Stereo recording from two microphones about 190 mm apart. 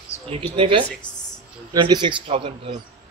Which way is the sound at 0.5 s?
30° right (ahead or behind).